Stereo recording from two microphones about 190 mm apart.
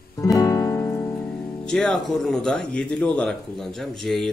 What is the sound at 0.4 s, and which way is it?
Music, 15° left (ahead or behind).